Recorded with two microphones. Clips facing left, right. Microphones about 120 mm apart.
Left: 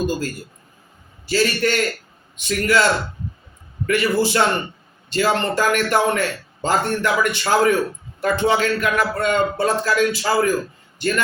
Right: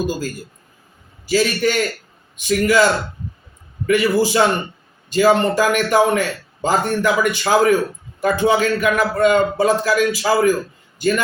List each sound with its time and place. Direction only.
1.3 s a man's voice: 10° right (ahead or behind)
3.8 s a man's voice: 10° right (ahead or behind)